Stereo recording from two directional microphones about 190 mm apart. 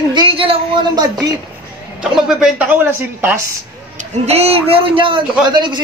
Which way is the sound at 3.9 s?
35° right (ahead or behind).